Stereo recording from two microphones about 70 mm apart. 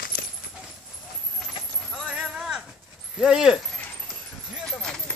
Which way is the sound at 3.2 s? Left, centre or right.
Centre.